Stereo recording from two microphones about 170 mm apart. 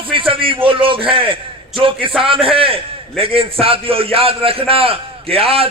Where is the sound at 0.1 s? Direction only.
30° right (ahead or behind).